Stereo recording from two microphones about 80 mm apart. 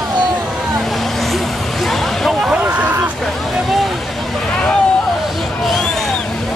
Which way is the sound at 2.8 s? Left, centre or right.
Right.